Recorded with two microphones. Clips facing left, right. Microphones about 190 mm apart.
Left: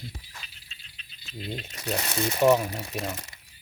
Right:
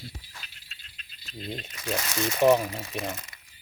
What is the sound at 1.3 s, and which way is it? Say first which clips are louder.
Speech: left 1 dB; centre (ahead or behind).